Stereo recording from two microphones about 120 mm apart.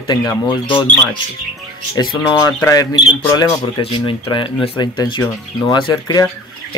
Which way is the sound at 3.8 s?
45° left (ahead or behind).